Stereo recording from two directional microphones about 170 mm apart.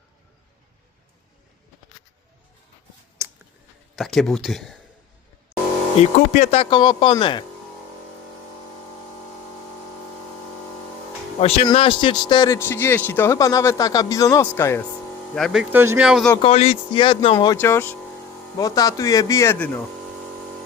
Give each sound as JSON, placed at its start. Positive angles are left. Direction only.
{"t": 3.9, "sound": "speech", "side_deg": 0}
{"t": 6.0, "sound": "speech", "side_deg": 45}
{"t": 11.3, "sound": "speech", "side_deg": 35}
{"t": 12.5, "sound": "speech", "side_deg": 15}
{"t": 15.4, "sound": "speech", "side_deg": 0}
{"t": 15.7, "sound": "speech", "side_deg": -15}
{"t": 16.0, "sound": "speech", "side_deg": 0}
{"t": 16.4, "sound": "speech", "side_deg": 35}
{"t": 17.3, "sound": "speech", "side_deg": 20}